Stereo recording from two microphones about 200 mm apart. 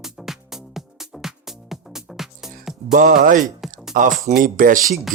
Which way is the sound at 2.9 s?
40° right (ahead or behind).